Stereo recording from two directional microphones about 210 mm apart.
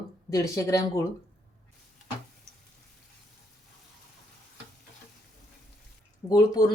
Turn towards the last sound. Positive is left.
turn(degrees=20)  # may be behind; listen again after turning